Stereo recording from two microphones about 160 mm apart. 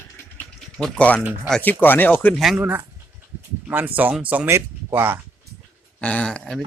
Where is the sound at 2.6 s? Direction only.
10° right (ahead or behind).